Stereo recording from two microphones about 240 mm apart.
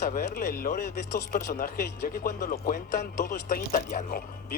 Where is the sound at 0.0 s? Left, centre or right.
Left.